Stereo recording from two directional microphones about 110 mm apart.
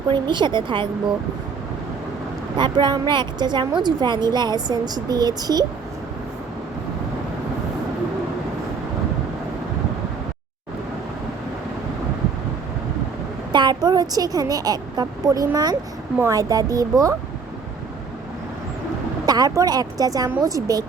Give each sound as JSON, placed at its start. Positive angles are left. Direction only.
{"t": 0.1, "sound": "speech", "side_deg": -45}
{"t": 2.6, "sound": "a woman's voice", "side_deg": -45}
{"t": 13.5, "sound": "a woman's voice", "side_deg": -40}
{"t": 19.2, "sound": "a woman's voice", "side_deg": -35}